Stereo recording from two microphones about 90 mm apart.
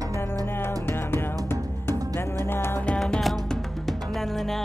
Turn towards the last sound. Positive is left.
turn(degrees=5)  # may be behind; listen again after turning